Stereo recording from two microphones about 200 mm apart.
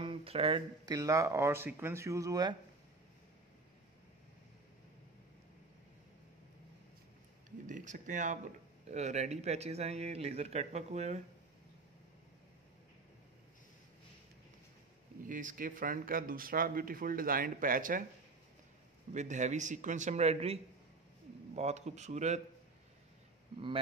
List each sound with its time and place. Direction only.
0.0 s speech: 25° right (ahead or behind)
0.9 s speech: 15° right (ahead or behind)
7.6 s speech: 40° right (ahead or behind)
15.2 s speech: 40° right (ahead or behind)
19.1 s speech: 35° right (ahead or behind)
21.5 s speech: 35° right (ahead or behind)